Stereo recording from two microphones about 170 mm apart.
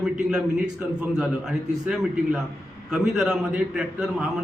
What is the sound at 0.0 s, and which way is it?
A man's voice, 5° right (ahead or behind).